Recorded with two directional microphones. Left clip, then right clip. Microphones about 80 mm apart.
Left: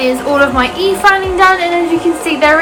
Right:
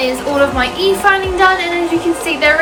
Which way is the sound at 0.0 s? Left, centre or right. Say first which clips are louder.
Left 3 dB; left.